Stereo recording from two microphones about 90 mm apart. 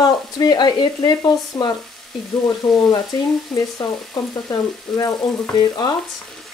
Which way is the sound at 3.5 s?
5° left (ahead or behind).